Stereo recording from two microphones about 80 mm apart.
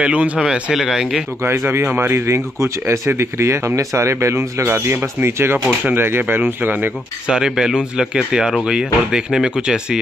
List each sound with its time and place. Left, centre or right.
0.0 s speech: centre
1.7 s speech: right
7.2 s speech: centre